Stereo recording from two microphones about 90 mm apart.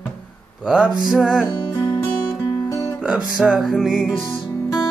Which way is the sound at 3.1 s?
5° right (ahead or behind).